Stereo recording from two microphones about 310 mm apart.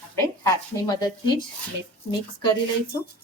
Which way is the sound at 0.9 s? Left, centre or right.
Centre.